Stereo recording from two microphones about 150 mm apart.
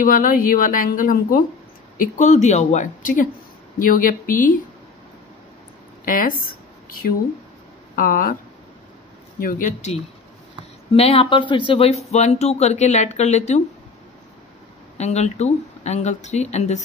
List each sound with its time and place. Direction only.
0.0 s a woman's voice: 65° left (ahead or behind)
2.0 s speech: 55° left (ahead or behind)
6.0 s a woman's voice: 65° left (ahead or behind)
7.9 s a woman's voice: 70° left (ahead or behind)
9.4 s speech: 65° left (ahead or behind)
10.9 s speech: 40° left (ahead or behind)
15.0 s speech: 50° left (ahead or behind)